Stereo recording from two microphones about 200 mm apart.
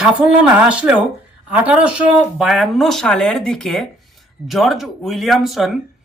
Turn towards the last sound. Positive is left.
turn(degrees=0)  # may be behind; listen again after turning